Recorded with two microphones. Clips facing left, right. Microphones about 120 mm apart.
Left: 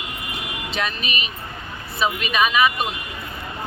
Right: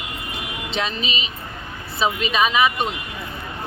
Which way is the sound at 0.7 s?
25° right (ahead or behind).